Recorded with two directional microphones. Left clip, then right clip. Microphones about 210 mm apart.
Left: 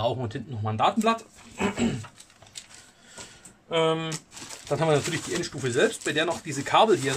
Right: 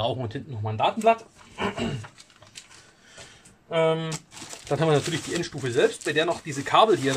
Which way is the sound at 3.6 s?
15° left (ahead or behind).